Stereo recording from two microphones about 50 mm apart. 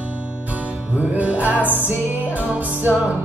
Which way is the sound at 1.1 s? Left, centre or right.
Right.